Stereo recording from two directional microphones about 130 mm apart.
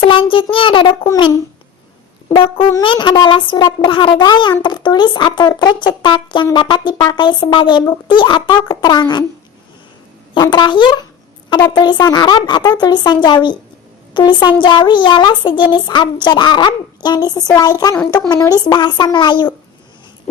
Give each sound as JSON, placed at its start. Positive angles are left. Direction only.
{"t": 0.0, "sound": "child singing", "side_deg": 40}
{"t": 0.5, "sound": "speech", "side_deg": 40}
{"t": 2.3, "sound": "brass instrument", "side_deg": 40}
{"t": 2.8, "sound": "speech", "side_deg": 40}
{"t": 10.3, "sound": "speech", "side_deg": 35}
{"t": 20.3, "sound": "a sound", "side_deg": 65}